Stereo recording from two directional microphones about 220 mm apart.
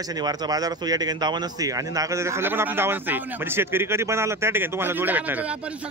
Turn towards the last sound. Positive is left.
turn(degrees=-5)  # may be behind; listen again after turning